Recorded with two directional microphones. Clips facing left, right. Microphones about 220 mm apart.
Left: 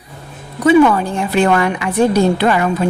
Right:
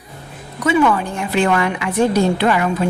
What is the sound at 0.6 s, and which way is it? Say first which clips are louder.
A woman's voice: left 5 dB; 35° left (ahead or behind).